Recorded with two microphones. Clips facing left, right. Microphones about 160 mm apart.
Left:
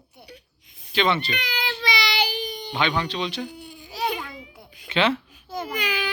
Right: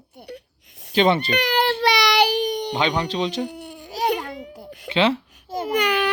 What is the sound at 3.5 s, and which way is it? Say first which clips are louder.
Baby cry: right 5 dB; 70° right (ahead or behind).